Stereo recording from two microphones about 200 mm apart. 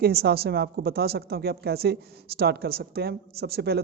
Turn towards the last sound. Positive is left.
turn(degrees=-55)  # may be behind; listen again after turning